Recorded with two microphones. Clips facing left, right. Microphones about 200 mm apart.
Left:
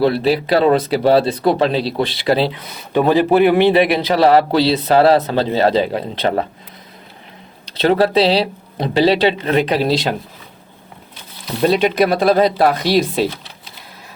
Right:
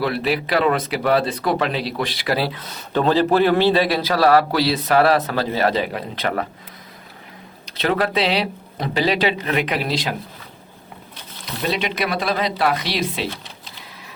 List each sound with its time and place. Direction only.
0.0 s speech: 30° left (ahead or behind)
7.8 s speech: 30° left (ahead or behind)
11.6 s speech: 40° left (ahead or behind)